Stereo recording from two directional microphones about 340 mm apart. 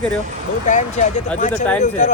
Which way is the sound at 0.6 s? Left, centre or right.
Left.